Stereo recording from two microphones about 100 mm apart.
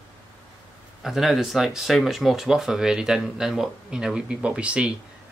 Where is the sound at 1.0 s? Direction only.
Centre (ahead or behind).